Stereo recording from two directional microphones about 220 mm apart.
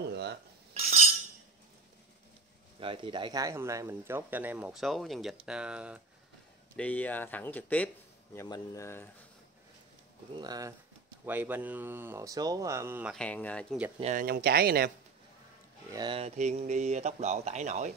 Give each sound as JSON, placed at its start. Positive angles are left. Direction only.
{"t": 0.1, "sound": "dishes", "side_deg": -50}
{"t": 0.7, "sound": "cutlery", "side_deg": -30}
{"t": 2.8, "sound": "speech", "side_deg": -20}
{"t": 6.8, "sound": "speech", "side_deg": 5}
{"t": 10.3, "sound": "speech", "side_deg": -20}
{"t": 13.1, "sound": "speech", "side_deg": 5}
{"t": 13.9, "sound": "speech", "side_deg": -30}
{"t": 14.2, "sound": "speech", "side_deg": -45}
{"t": 15.9, "sound": "speech", "side_deg": -20}